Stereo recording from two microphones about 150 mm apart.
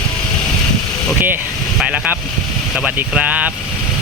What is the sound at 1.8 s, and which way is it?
Vehicle, 5° right (ahead or behind).